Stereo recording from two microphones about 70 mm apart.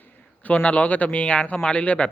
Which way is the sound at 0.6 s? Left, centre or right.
Centre.